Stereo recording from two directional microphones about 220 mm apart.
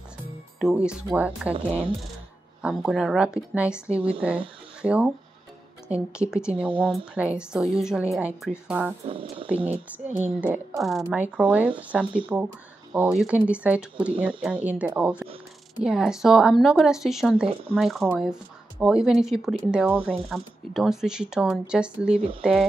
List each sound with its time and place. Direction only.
0.6 s speech: 5° right (ahead or behind)
2.6 s speech: 5° right (ahead or behind)
9.0 s speech: 25° right (ahead or behind)
10.2 s a woman's voice: 10° right (ahead or behind)